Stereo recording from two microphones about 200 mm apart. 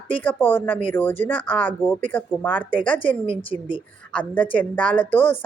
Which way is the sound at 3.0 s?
25° left (ahead or behind).